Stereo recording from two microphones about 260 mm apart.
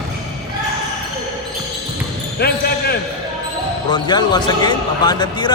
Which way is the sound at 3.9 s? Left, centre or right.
Centre.